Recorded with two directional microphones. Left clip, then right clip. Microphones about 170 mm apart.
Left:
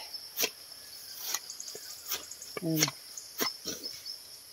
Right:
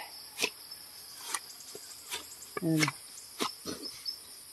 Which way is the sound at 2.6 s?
15° right (ahead or behind).